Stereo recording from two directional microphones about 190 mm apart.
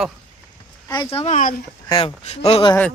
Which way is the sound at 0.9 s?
20° left (ahead or behind).